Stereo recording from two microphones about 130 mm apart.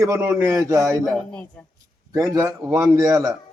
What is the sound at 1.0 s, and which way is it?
Speech, 10° left (ahead or behind).